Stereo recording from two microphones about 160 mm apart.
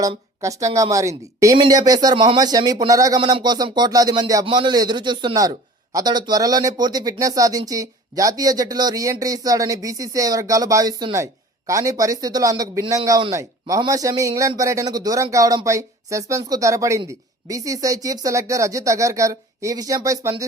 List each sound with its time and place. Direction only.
0.0 s a man's voice: 20° right (ahead or behind)